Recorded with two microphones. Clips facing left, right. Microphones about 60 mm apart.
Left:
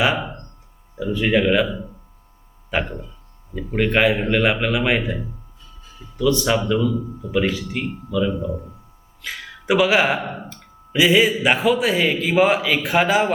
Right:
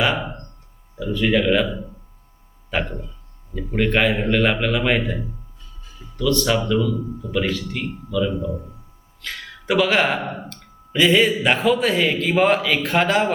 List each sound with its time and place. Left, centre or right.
0.9 s a man's voice: centre
1.5 s a man's voice: centre
10.2 s speech: centre